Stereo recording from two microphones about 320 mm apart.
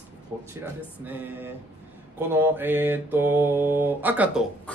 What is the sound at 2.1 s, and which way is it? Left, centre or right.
Mantra, centre.